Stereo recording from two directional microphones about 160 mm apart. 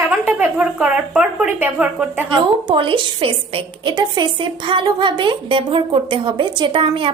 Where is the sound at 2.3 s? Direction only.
30° right (ahead or behind).